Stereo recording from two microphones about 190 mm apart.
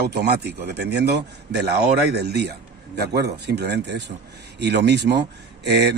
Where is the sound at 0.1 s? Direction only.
60° right (ahead or behind).